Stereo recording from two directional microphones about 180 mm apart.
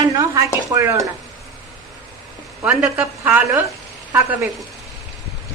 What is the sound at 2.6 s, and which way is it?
A woman's voice, 5° right (ahead or behind).